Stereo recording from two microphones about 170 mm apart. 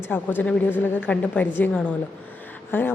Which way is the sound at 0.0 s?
10° left (ahead or behind).